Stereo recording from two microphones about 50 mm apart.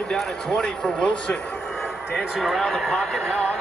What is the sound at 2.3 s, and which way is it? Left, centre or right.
A man's voice, centre.